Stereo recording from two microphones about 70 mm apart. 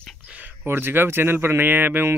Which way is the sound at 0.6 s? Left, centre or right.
Right.